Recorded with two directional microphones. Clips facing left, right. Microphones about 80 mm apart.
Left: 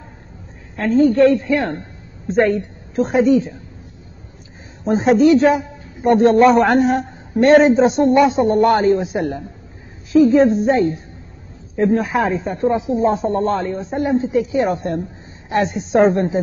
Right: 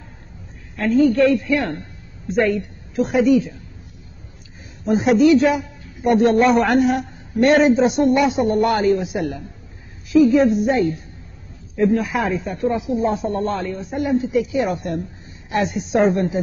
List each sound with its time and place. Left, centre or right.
0.7 s a man's voice: left
4.8 s a man's voice: left